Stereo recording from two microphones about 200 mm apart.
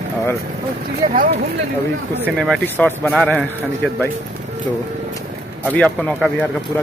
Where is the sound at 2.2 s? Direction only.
Centre (ahead or behind).